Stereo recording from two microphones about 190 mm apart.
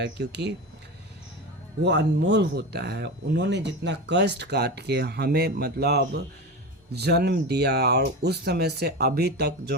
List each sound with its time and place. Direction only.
0.0 s speech: 65° right (ahead or behind)
1.8 s speech: 65° right (ahead or behind)